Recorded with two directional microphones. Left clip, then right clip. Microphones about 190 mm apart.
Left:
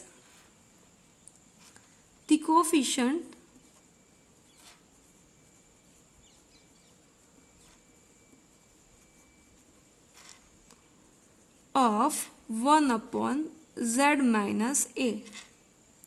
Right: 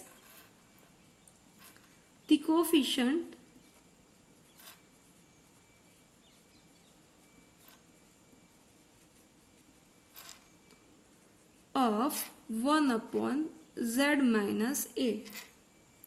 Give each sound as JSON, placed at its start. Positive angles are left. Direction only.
{"t": 2.2, "sound": "a woman's voice", "side_deg": 50}
{"t": 11.7, "sound": "a sound", "side_deg": 50}
{"t": 15.2, "sound": "speech", "side_deg": -10}